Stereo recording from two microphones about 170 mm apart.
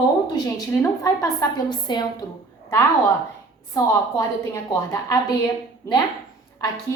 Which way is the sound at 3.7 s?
20° left (ahead or behind).